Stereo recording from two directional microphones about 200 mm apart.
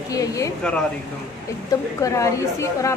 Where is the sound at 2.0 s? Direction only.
15° left (ahead or behind).